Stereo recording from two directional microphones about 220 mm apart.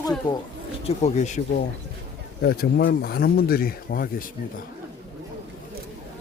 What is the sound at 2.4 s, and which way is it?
Speech, 45° left (ahead or behind).